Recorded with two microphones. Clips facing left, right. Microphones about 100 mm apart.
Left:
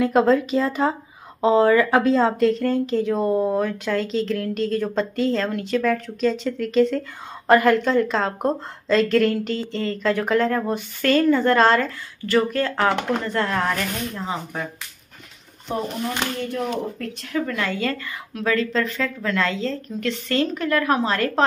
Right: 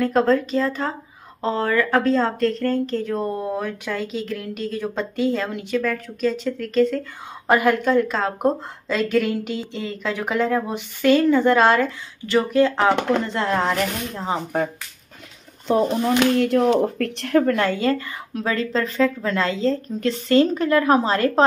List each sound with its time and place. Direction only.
0.0 s speech: 10° left (ahead or behind); by 5.8 s 10° right (ahead or behind)
5.8 s speech: centre (ahead or behind)
7.4 s a woman's voice: 10° right (ahead or behind); by 14.4 s 30° right (ahead or behind)
16.3 s speech: 80° right; by 17.6 s 55° right (ahead or behind)
17.6 s a woman's voice: 30° right (ahead or behind)